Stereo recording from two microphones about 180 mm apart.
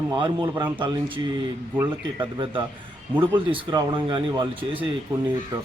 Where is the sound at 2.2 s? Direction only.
25° right (ahead or behind).